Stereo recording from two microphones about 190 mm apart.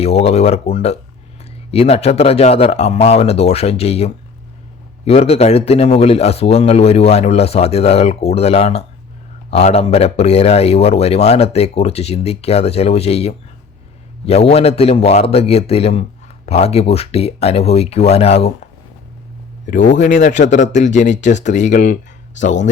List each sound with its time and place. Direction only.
0.0 s speech: 30° left (ahead or behind)
19.6 s speech: 40° left (ahead or behind)